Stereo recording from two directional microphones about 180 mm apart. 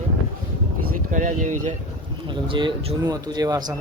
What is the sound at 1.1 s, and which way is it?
Speech, 45° right (ahead or behind).